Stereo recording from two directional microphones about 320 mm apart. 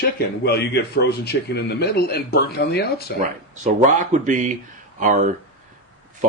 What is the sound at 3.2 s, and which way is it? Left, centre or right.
Speech, right.